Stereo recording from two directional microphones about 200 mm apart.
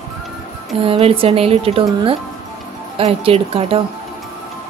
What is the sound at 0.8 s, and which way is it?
Speech, 30° right (ahead or behind).